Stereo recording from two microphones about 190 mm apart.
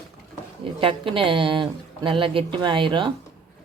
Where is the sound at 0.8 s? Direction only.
25° right (ahead or behind).